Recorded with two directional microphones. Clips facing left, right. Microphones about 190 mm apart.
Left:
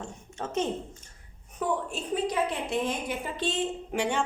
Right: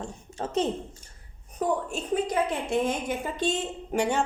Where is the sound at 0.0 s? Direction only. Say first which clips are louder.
Right 3 dB; 35° right (ahead or behind).